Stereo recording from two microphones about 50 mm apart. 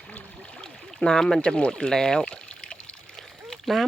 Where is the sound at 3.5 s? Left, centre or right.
Centre.